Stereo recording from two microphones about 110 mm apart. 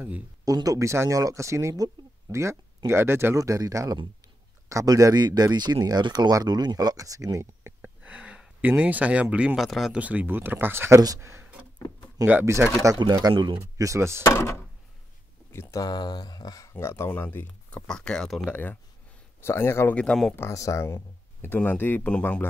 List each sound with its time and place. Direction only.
0.5 s speech: 35° right (ahead or behind)
7.8 s speech: 15° right (ahead or behind)
9.9 s speech: 15° right (ahead or behind)
13.0 s speech: 40° right (ahead or behind)
13.3 s speech: 50° right (ahead or behind)
13.6 s speech: 30° right (ahead or behind)
14.2 s speech: 25° left (ahead or behind)
15.8 s speech: 40° left (ahead or behind)
16.7 s speech: 25° left (ahead or behind); by 18.6 s 5° left (ahead or behind)
19.4 s speech: 25° left (ahead or behind)
20.0 s speech: 5° left (ahead or behind)
20.3 s speech: 30° left (ahead or behind)